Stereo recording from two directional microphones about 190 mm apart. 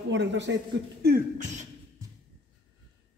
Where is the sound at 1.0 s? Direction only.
50° right (ahead or behind).